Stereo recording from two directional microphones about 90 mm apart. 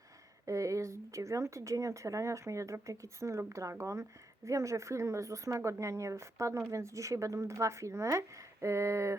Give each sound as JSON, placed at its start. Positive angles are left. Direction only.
{"t": 0.4, "sound": "speech", "side_deg": -35}